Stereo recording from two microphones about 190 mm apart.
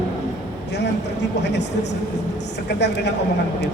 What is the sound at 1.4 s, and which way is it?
Speech, 65° left (ahead or behind).